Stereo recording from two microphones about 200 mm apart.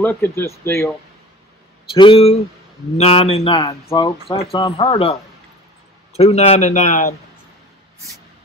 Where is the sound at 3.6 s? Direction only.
20° left (ahead or behind); by 7.1 s 35° left (ahead or behind).